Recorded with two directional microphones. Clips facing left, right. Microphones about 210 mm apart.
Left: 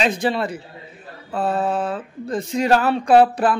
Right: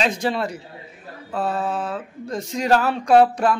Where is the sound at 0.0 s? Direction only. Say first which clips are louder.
Left 2 dB; centre (ahead or behind).